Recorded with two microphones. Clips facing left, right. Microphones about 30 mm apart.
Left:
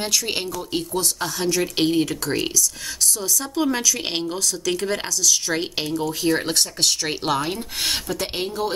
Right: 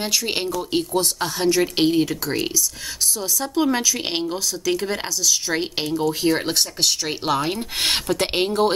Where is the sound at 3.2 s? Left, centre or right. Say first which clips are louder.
Right 4 dB; centre.